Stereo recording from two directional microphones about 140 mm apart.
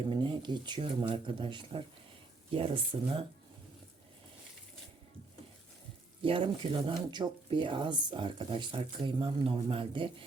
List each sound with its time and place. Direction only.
0.1 s speech: 35° right (ahead or behind)
6.2 s speech: 40° right (ahead or behind)